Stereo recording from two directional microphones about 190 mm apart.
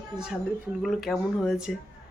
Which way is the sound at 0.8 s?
Centre (ahead or behind).